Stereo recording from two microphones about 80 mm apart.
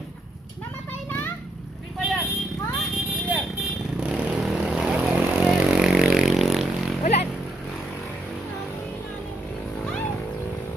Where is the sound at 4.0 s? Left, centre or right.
Centre.